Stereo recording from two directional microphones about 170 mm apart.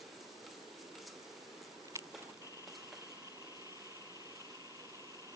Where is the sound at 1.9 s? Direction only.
15° right (ahead or behind).